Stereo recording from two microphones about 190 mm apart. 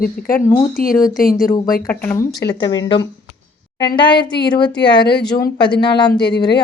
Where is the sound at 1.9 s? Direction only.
10° left (ahead or behind).